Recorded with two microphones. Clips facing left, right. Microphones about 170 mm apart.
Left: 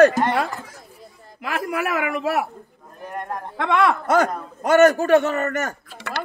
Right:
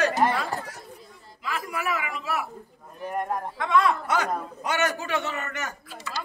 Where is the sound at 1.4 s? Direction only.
65° left (ahead or behind).